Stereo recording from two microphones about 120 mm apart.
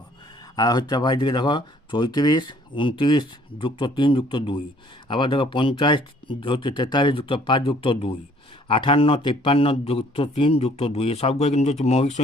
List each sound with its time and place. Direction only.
0.5 s a man's voice: 35° left (ahead or behind); by 12.2 s 65° left (ahead or behind)